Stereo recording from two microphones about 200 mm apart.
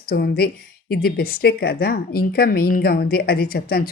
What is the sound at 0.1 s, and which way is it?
A woman's voice, 50° left (ahead or behind).